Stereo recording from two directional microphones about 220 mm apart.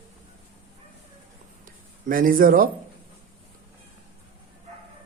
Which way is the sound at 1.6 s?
40° right (ahead or behind).